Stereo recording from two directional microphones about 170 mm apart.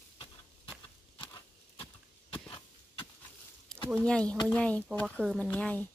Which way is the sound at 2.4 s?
30° left (ahead or behind).